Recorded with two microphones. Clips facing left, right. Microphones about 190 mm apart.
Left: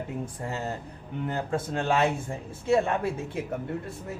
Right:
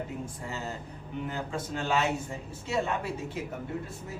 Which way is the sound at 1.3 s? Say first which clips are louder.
Left 7 dB; 55° left (ahead or behind).